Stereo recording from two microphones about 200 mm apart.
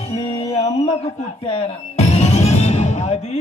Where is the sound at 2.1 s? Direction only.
30° left (ahead or behind).